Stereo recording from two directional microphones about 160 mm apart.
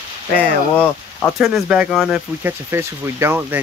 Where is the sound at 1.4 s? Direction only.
5° right (ahead or behind).